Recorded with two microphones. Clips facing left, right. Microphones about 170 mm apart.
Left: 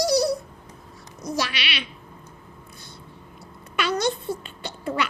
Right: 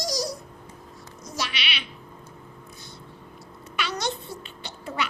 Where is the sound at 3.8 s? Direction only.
55° left (ahead or behind).